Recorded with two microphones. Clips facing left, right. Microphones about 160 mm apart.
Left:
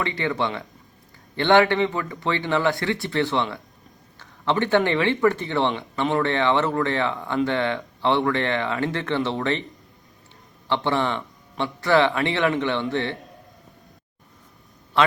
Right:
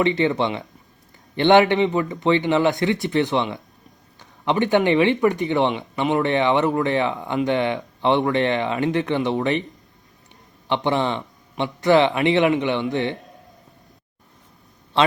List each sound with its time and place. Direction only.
0.0 s speech: 20° right (ahead or behind)
10.7 s speech: 15° right (ahead or behind)
15.0 s a man's voice: 20° right (ahead or behind)